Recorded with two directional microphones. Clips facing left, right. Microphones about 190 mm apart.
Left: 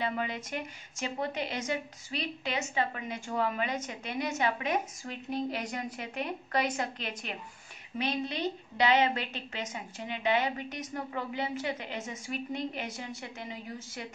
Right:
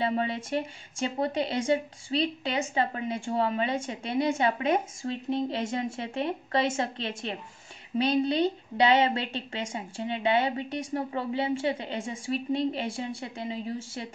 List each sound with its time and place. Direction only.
0.0 s a woman's voice: 30° right (ahead or behind)